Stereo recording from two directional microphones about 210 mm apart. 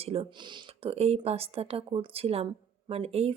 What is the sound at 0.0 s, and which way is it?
Speech, 25° right (ahead or behind).